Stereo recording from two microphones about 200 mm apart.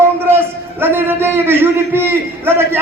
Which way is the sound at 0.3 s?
10° right (ahead or behind).